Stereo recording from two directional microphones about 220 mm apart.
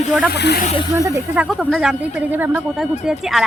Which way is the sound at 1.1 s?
15° right (ahead or behind).